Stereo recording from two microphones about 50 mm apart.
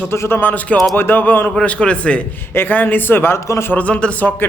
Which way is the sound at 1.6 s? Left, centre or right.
Left.